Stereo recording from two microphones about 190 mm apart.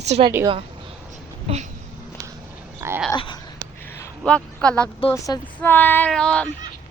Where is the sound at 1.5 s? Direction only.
30° right (ahead or behind).